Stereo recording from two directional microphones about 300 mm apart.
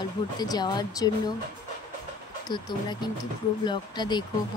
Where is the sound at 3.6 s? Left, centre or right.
Centre.